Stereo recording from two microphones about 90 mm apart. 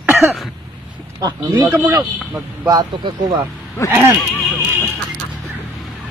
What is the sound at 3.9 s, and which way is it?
Speech, 25° right (ahead or behind).